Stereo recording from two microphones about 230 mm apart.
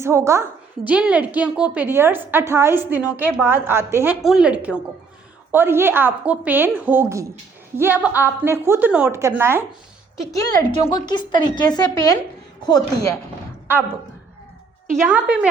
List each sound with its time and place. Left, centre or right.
0.0 s a woman's voice: centre
10.3 s a woman's voice: centre
14.9 s a woman's voice: centre